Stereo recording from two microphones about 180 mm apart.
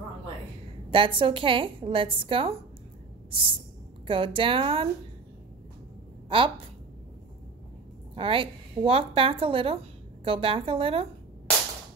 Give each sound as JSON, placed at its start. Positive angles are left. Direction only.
{"t": 0.8, "sound": "a woman's voice", "side_deg": -30}
{"t": 4.1, "sound": "a woman's voice", "side_deg": -30}
{"t": 6.2, "sound": "a woman's voice", "side_deg": -30}
{"t": 8.2, "sound": "a woman's voice", "side_deg": -30}